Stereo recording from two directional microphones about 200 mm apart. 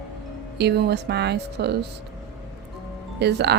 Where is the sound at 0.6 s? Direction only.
55° right (ahead or behind).